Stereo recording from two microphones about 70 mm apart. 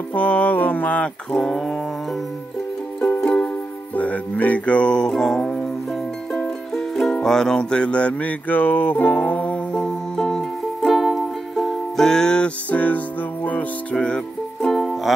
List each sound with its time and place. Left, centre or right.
0.1 s music: left
1.4 s dog: centre
3.9 s music: left; by 15.1 s centre